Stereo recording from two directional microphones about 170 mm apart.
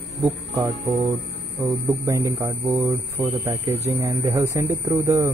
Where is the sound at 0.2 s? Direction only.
15° right (ahead or behind).